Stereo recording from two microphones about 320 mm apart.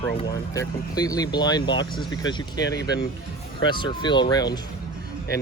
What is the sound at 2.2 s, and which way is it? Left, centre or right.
Speech, left.